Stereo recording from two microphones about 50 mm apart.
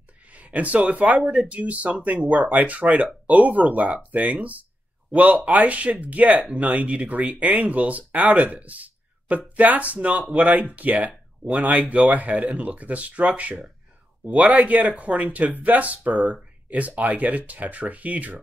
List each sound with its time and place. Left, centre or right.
0.3 s speech: right